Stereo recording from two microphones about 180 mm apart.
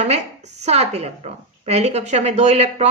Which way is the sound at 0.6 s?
35° right (ahead or behind).